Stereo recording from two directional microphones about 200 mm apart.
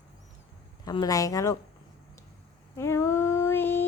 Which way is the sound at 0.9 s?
20° left (ahead or behind).